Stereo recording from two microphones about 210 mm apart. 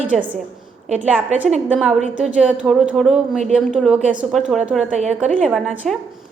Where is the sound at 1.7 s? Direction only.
5° right (ahead or behind).